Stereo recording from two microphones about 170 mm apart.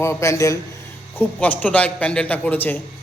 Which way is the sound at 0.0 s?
15° left (ahead or behind).